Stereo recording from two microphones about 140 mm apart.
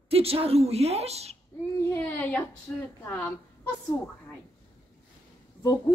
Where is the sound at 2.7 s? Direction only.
15° left (ahead or behind).